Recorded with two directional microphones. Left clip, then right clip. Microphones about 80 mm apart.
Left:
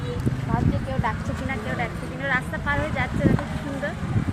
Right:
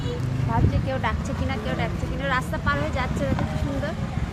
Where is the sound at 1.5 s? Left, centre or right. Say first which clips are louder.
Even; centre.